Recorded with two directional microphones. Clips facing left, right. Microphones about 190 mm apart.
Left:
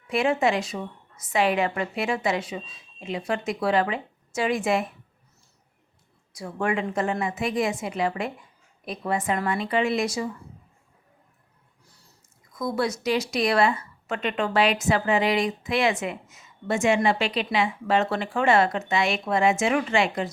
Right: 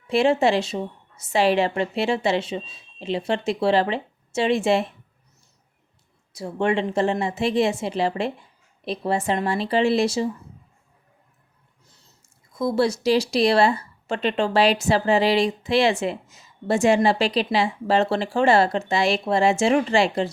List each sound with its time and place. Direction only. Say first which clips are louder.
0.1 s a woman's voice: right 4 dB; 30° right (ahead or behind)
6.3 s a woman's voice: right 4 dB; 25° right (ahead or behind)
11.9 s squish: even; 20° right (ahead or behind)
12.5 s speech: right 5 dB; 30° right (ahead or behind)